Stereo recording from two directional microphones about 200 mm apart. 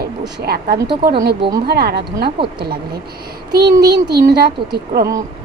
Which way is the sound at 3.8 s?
50° right (ahead or behind).